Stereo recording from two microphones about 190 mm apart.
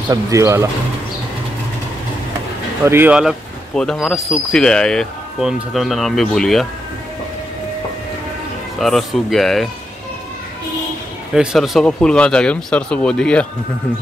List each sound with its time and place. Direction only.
0.1 s speech: 15° right (ahead or behind)
2.8 s speech: 10° right (ahead or behind)
8.7 s speech: centre (ahead or behind)
11.3 s speech: centre (ahead or behind)